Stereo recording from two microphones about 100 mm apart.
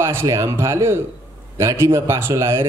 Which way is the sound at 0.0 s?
25° right (ahead or behind).